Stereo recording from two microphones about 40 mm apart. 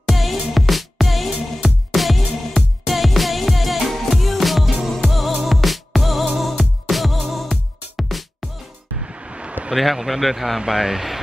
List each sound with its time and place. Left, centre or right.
0.0 s music: centre
9.0 s vehicle: right
9.8 s speech: centre